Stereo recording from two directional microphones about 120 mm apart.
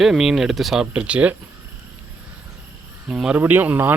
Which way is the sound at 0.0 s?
5° right (ahead or behind).